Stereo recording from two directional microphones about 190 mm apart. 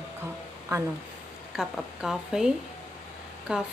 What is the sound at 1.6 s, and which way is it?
Speech, 5° right (ahead or behind).